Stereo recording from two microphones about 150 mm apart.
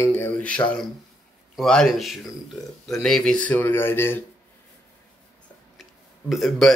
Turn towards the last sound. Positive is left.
turn(degrees=0)  # may be behind; listen again after turning